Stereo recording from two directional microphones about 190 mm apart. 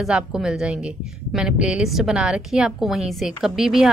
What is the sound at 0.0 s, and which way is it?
A woman's voice, 5° right (ahead or behind).